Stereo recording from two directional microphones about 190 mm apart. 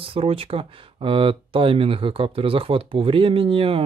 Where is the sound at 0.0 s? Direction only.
30° right (ahead or behind).